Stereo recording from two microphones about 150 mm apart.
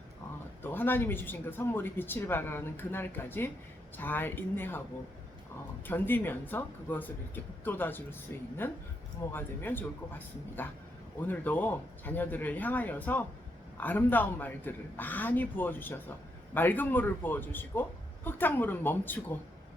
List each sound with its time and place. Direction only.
0.6 s speech: 15° left (ahead or behind)
5.9 s speech: 15° left (ahead or behind)